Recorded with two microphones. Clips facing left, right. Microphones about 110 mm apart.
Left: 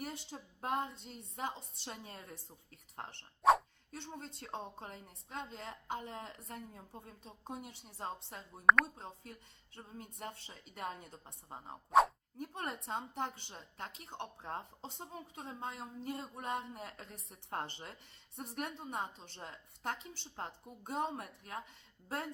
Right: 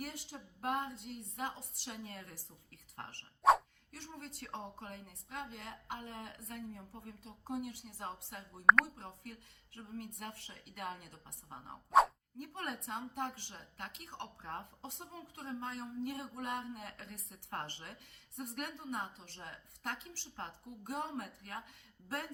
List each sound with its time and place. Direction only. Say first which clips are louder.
0.0 s a woman's voice: left 1 dB; 25° left (ahead or behind)
3.4 s dog: even; centre (ahead or behind)
3.9 s a woman's voice: left 2 dB; 25° left (ahead or behind)
8.6 s speech: even; centre (ahead or behind)
9.7 s a woman's voice: right 4 dB; 25° left (ahead or behind)
11.9 s a sound: even; centre (ahead or behind)
12.4 s a woman's voice: left 1 dB; 25° left (ahead or behind)